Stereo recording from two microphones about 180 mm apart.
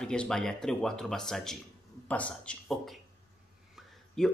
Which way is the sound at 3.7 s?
Centre (ahead or behind).